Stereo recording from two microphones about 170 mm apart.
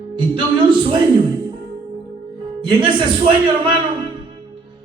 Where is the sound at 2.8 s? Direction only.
30° right (ahead or behind).